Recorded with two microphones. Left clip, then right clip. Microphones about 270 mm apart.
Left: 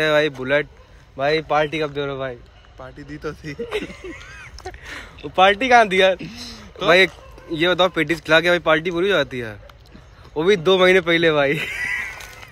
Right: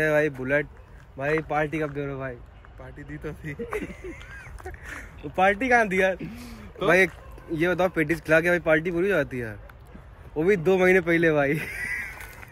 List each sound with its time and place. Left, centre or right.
0.0 s speech: centre
2.8 s speech: left
4.1 s a sound: centre
5.3 s speech: centre
6.1 s speech: left
7.5 s speech: centre